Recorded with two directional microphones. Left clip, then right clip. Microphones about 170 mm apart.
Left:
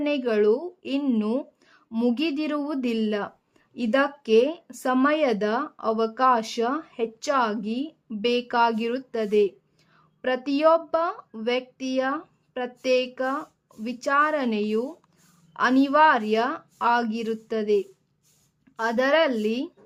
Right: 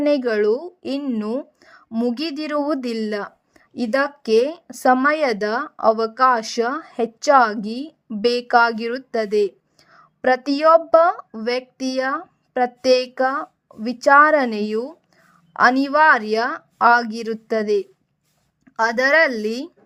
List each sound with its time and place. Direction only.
0.0 s speech: 30° right (ahead or behind)
1.9 s speech: 10° right (ahead or behind)
2.1 s a woman's voice: 30° right (ahead or behind)